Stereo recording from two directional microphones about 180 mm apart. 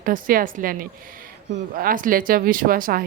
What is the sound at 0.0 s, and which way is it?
Speech, 50° right (ahead or behind).